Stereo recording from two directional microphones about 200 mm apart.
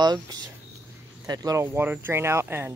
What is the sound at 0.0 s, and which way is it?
Speech, 20° right (ahead or behind).